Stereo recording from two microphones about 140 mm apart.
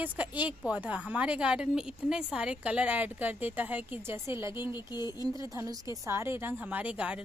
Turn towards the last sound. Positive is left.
turn(degrees=-10)  # may be behind; listen again after turning